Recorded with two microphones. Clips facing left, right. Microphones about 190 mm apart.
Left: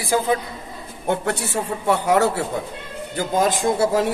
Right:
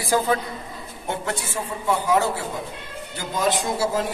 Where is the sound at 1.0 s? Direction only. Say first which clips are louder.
Left 6 dB; 65° left (ahead or behind).